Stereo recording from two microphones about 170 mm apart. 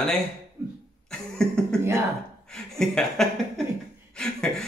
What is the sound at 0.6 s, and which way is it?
Cough, 15° right (ahead or behind).